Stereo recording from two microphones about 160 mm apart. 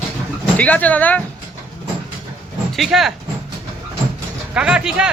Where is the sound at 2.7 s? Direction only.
Centre (ahead or behind).